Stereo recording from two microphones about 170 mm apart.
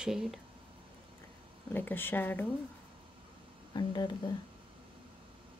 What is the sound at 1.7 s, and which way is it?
Speech, 10° left (ahead or behind).